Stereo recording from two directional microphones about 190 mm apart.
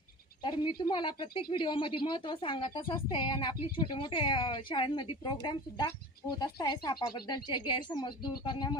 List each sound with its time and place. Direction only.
0.4 s a woman's voice: 25° left (ahead or behind)